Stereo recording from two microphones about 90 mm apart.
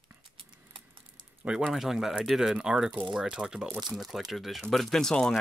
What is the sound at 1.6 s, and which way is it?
Speech, centre (ahead or behind).